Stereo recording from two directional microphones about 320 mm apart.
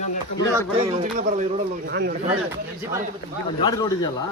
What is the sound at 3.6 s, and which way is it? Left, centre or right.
Speech, centre.